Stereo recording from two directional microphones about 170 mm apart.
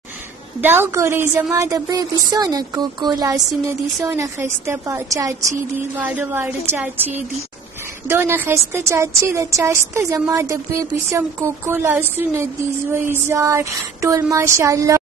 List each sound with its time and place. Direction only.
0.6 s a woman's voice: 15° right (ahead or behind)
8.1 s a woman's voice: 10° right (ahead or behind)